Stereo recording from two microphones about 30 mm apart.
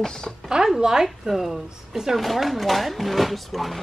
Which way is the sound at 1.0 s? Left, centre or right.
Centre.